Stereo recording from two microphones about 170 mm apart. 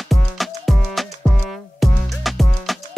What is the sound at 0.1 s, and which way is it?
Music, centre (ahead or behind).